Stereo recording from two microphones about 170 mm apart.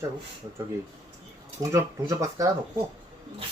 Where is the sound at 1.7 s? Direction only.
20° right (ahead or behind).